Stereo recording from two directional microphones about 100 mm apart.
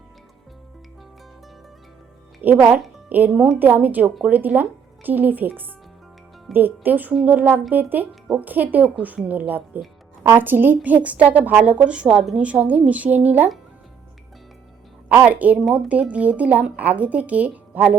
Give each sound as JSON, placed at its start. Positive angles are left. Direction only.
{"t": 2.4, "sound": "speech", "side_deg": -20}
{"t": 15.1, "sound": "speech", "side_deg": -15}